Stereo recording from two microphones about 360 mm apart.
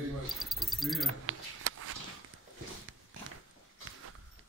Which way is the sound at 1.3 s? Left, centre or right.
Right.